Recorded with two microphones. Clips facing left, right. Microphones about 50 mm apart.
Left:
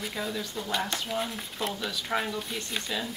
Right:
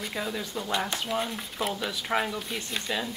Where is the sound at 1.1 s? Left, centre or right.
Centre.